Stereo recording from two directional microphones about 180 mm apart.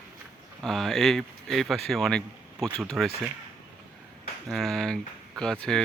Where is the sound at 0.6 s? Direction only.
Centre (ahead or behind).